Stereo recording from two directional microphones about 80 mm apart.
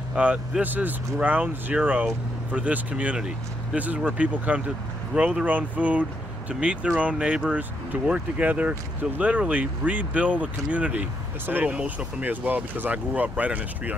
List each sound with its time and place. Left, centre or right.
0.1 s speech: centre